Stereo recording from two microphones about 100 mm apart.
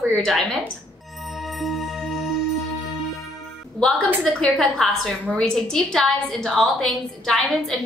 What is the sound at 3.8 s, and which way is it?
A woman's voice, 10° left (ahead or behind).